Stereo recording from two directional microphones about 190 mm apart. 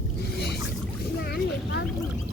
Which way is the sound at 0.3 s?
60° left (ahead or behind).